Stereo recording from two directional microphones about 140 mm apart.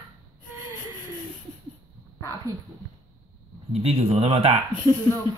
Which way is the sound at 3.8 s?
45° right (ahead or behind).